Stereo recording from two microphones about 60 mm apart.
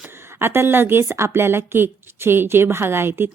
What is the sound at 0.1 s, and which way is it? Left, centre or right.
A woman's voice, right.